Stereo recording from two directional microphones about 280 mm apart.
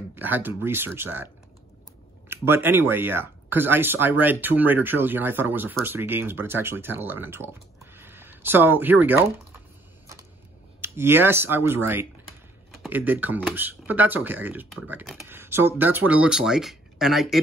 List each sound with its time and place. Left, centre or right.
0.1 s speech: centre
10.8 s speech: centre